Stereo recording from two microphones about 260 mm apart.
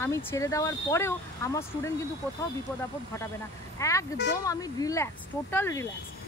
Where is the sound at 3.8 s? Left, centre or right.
Centre.